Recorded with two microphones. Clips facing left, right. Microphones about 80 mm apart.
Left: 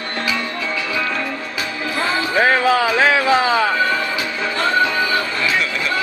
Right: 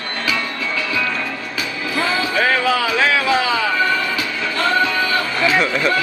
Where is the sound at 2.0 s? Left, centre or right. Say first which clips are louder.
Left 1 dB; left.